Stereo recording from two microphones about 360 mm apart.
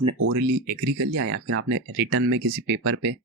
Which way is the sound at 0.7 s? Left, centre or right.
Right.